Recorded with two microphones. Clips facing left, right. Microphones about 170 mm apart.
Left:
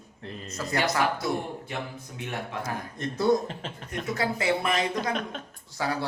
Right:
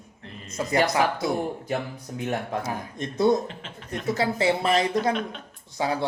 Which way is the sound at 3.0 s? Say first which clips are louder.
Right 2 dB; 20° right (ahead or behind).